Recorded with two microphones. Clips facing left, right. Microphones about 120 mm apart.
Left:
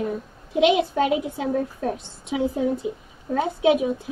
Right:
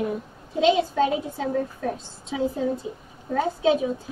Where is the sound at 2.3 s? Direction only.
15° left (ahead or behind).